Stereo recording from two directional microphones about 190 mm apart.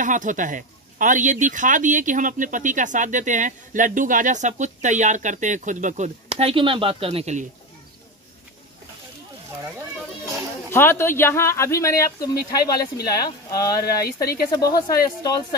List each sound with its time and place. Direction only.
0.0 s speech: 40° right (ahead or behind)
10.7 s speech: 10° left (ahead or behind)
14.0 s speech: 55° left (ahead or behind)
14.5 s speech: 20° left (ahead or behind)